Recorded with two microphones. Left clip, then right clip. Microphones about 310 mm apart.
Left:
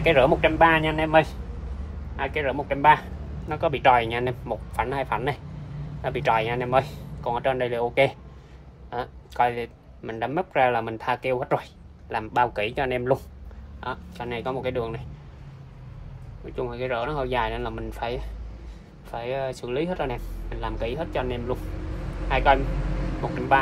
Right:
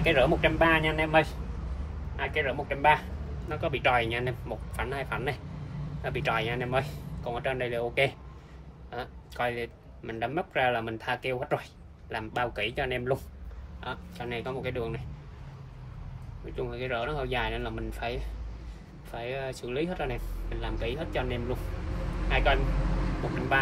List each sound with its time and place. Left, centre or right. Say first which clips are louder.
0.0 s a man's voice: left 5 dB; left
16.5 s a man's voice: left 5 dB; centre